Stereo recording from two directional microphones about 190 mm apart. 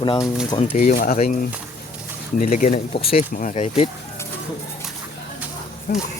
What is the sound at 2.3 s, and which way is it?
Speech, 40° left (ahead or behind).